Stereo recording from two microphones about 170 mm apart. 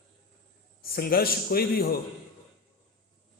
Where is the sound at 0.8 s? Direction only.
60° left (ahead or behind).